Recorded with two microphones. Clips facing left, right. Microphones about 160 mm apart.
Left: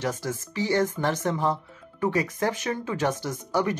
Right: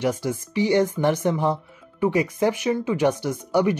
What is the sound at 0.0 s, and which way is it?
Speech, 15° right (ahead or behind).